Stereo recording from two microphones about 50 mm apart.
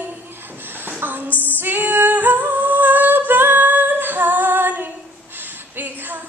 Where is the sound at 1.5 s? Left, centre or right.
Right.